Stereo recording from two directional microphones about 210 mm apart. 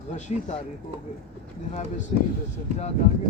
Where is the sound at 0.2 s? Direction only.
35° left (ahead or behind).